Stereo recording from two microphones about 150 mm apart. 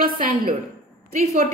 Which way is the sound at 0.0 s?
65° right (ahead or behind).